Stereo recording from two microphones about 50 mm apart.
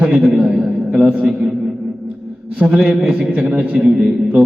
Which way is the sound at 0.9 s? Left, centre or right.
Right.